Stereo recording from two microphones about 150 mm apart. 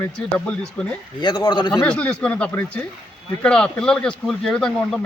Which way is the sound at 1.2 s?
30° left (ahead or behind).